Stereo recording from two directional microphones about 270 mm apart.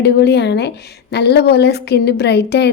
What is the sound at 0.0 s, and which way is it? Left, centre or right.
A woman's voice, left.